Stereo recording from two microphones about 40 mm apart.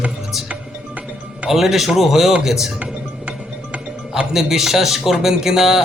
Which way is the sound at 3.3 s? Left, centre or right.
Right.